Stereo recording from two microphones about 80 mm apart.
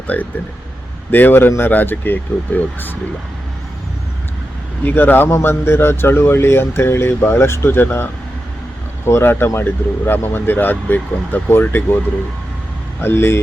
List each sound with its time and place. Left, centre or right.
0.1 s speech: centre
4.8 s speech: left
13.0 s speech: left